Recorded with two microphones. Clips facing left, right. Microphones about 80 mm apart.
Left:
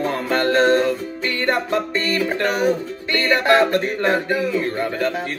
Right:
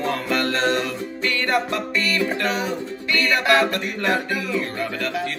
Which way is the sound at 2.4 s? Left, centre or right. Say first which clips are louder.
Left 6 dB; left.